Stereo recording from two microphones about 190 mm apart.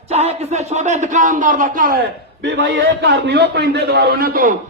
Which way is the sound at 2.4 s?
70° right (ahead or behind).